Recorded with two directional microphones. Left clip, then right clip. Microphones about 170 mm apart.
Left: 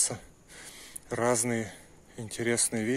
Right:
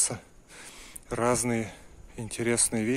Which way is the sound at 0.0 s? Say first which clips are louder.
Right 1 dB; 25° right (ahead or behind).